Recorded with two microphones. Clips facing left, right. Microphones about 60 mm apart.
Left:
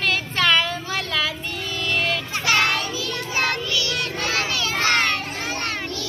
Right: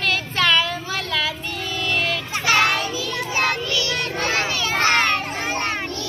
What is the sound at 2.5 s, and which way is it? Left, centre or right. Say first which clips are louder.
Children playing: right 2 dB; centre.